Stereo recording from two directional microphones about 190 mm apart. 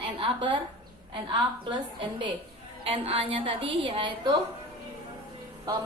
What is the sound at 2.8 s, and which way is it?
A woman's voice, 30° right (ahead or behind).